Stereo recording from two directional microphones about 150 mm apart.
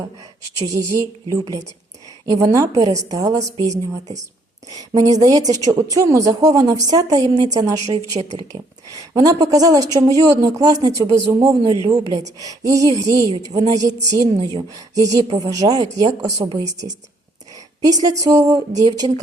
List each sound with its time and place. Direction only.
0.6 s a woman's voice: 20° right (ahead or behind)
2.2 s a woman's voice: 20° right (ahead or behind)
4.7 s a woman's voice: 25° right (ahead or behind)
7.9 s a woman's voice: 45° right (ahead or behind)
9.0 s a woman's voice: 25° right (ahead or behind)
18.2 s a woman's voice: 25° right (ahead or behind)